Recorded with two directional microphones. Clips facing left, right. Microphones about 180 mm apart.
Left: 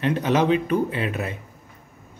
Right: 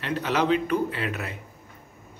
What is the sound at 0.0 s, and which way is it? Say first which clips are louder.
Speech: left 5 dB; 20° left (ahead or behind).